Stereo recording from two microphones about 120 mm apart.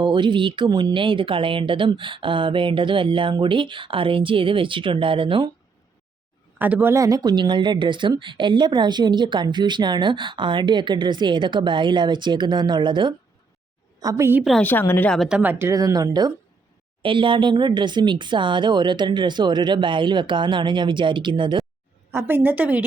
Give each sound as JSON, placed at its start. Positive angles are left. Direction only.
{"t": 0.0, "sound": "speech", "side_deg": -40}
{"t": 6.6, "sound": "speech", "side_deg": -15}
{"t": 14.0, "sound": "speech", "side_deg": -30}
{"t": 14.6, "sound": "speech", "side_deg": 15}
{"t": 15.1, "sound": "speech", "side_deg": 0}
{"t": 15.4, "sound": "speech", "side_deg": -15}
{"t": 17.0, "sound": "speech", "side_deg": -45}
{"t": 22.1, "sound": "a woman's voice", "side_deg": -15}